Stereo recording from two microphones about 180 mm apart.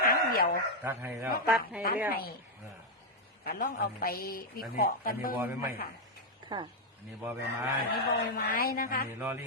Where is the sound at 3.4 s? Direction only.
50° left (ahead or behind).